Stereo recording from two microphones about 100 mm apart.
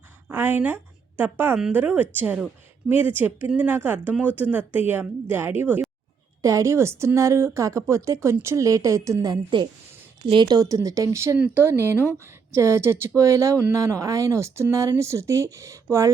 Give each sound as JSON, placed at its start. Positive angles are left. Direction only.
{"t": 0.3, "sound": "a sound", "side_deg": -20}
{"t": 1.7, "sound": "speech", "side_deg": -15}
{"t": 6.4, "sound": "a woman's voice", "side_deg": -30}
{"t": 11.3, "sound": "speech", "side_deg": -10}
{"t": 11.6, "sound": "speech", "side_deg": -25}